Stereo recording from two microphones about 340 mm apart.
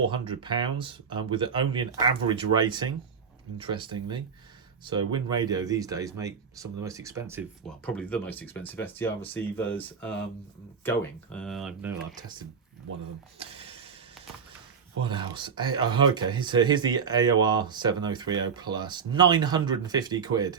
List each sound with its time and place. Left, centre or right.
0.1 s speech: centre
7.9 s speech: centre
13.4 s a sound: centre
15.0 s speech: centre